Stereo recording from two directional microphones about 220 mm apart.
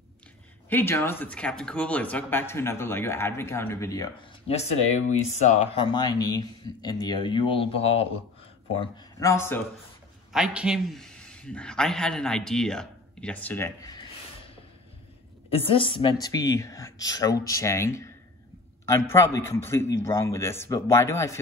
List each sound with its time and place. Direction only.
0.7 s speech: 10° left (ahead or behind)
4.5 s speech: 30° left (ahead or behind)
8.9 s speech: 15° left (ahead or behind)
10.3 s a man's voice: 5° right (ahead or behind)
15.5 s speech: 25° left (ahead or behind)